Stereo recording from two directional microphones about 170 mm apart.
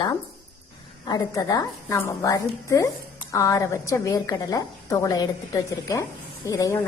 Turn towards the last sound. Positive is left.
turn(degrees=20)  # may be behind; listen again after turning